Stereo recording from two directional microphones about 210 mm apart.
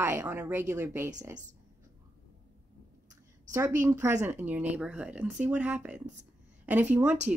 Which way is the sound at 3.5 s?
15° right (ahead or behind).